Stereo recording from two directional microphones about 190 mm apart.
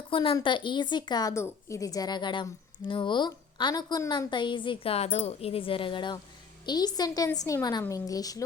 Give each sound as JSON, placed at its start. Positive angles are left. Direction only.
{"t": 0.1, "sound": "speech", "side_deg": 25}